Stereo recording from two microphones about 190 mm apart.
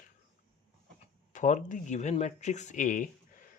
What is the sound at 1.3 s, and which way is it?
Speech, 40° left (ahead or behind).